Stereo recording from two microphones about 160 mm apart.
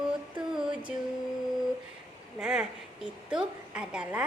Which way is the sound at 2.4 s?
5° right (ahead or behind).